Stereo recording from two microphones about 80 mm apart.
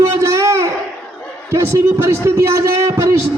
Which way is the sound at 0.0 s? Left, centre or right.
Right.